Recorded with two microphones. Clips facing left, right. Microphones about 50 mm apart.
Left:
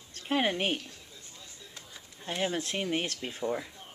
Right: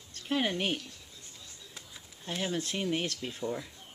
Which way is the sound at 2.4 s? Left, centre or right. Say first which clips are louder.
Left 2 dB; centre.